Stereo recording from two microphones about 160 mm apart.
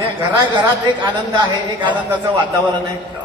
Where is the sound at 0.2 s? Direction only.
30° right (ahead or behind).